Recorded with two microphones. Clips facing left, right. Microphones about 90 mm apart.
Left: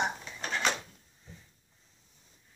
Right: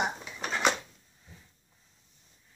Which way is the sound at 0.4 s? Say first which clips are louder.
Right 1 dB; 10° right (ahead or behind).